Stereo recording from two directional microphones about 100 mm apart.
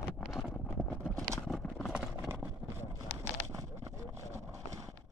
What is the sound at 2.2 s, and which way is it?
Clip-clop, 25° right (ahead or behind).